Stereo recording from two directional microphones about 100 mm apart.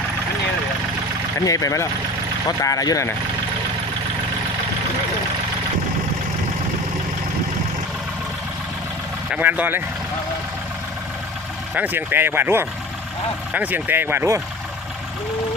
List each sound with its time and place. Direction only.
1.5 s speech: 35° left (ahead or behind)
9.3 s speech: 15° right (ahead or behind)
11.7 s speech: 15° right (ahead or behind)